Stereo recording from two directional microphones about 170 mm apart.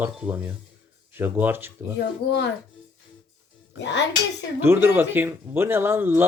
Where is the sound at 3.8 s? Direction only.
90° left.